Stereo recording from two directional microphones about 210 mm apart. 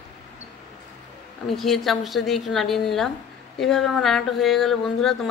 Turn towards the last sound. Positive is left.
turn(degrees=0)  # may be behind; listen again after turning